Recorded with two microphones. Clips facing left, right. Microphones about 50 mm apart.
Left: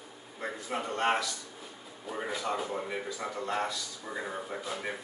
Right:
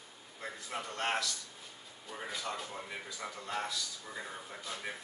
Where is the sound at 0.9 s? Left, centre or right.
Centre.